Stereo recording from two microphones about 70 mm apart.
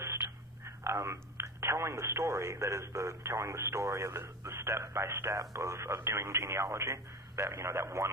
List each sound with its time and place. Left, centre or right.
0.6 s speech: right